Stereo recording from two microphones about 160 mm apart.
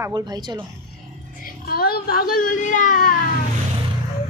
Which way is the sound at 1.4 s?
65° left (ahead or behind).